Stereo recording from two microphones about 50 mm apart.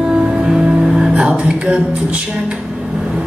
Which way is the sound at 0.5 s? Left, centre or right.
Centre.